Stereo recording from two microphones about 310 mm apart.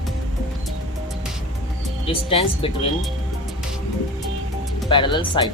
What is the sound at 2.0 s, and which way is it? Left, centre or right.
Speech, centre.